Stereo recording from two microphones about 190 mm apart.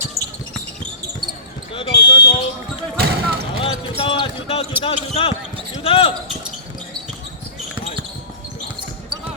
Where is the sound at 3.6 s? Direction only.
30° left (ahead or behind).